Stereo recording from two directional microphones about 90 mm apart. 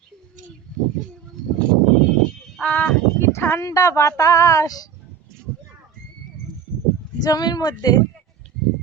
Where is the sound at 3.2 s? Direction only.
30° left (ahead or behind).